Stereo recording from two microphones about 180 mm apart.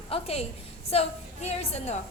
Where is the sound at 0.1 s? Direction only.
35° left (ahead or behind).